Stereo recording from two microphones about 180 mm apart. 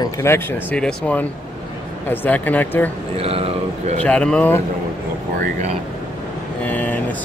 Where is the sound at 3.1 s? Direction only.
35° right (ahead or behind).